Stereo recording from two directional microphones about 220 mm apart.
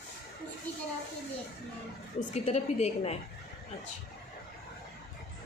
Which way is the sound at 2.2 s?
30° left (ahead or behind).